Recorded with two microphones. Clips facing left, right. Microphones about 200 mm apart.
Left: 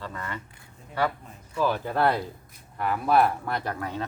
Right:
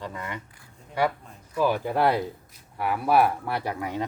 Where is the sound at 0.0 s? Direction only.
15° right (ahead or behind).